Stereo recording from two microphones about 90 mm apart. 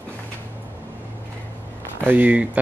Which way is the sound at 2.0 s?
20° right (ahead or behind).